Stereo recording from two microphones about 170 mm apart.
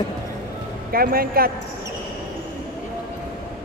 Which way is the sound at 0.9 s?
60° right (ahead or behind).